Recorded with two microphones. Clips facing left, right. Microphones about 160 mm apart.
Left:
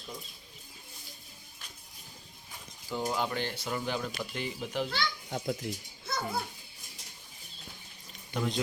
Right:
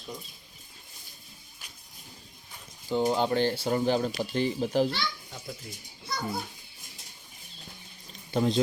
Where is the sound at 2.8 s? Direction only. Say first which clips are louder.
Right 7 dB; 25° right (ahead or behind).